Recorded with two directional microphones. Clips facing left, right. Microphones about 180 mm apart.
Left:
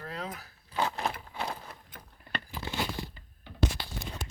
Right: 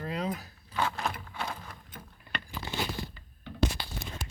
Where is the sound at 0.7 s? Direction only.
25° left (ahead or behind).